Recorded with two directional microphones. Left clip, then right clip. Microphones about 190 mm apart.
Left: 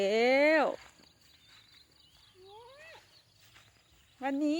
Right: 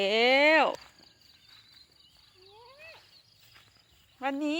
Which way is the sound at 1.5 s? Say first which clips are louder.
Right 3 dB; 45° right (ahead or behind).